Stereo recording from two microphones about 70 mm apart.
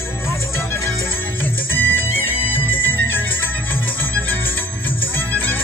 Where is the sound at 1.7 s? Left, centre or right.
Left.